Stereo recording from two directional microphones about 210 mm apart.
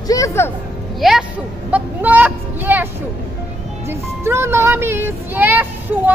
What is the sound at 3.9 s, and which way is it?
Music, 10° right (ahead or behind).